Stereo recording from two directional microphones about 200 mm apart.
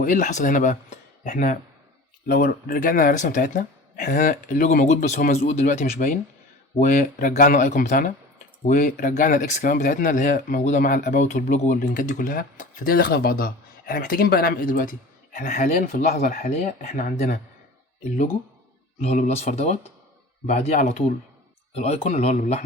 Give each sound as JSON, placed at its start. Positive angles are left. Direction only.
{"t": 0.0, "sound": "speech", "side_deg": 40}
{"t": 19.0, "sound": "speech", "side_deg": 30}